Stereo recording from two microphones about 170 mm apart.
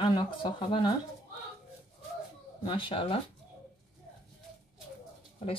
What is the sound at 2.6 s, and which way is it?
Speech, 30° left (ahead or behind).